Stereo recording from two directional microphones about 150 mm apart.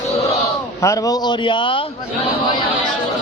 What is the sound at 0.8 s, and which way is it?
A man's voice, 20° left (ahead or behind).